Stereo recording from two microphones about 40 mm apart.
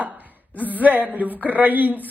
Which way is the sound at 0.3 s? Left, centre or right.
Right.